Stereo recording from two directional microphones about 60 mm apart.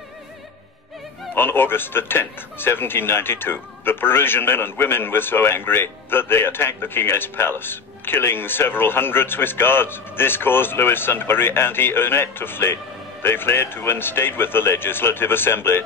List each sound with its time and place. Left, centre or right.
1.3 s speech: left